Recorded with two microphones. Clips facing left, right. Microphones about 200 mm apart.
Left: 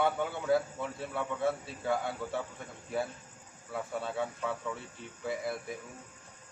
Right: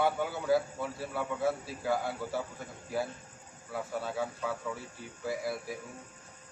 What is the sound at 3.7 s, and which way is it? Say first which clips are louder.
A man's voice: even; centre (ahead or behind).